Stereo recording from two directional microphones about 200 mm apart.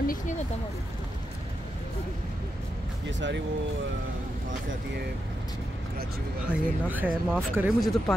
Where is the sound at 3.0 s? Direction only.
65° right (ahead or behind).